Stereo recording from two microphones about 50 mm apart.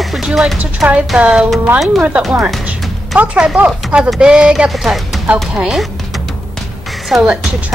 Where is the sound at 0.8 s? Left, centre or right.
Right.